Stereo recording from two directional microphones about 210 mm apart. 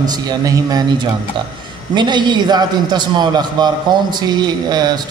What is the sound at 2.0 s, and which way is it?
A man's voice, 20° right (ahead or behind).